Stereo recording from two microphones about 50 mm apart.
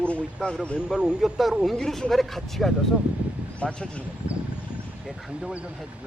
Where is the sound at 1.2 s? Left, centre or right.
Centre.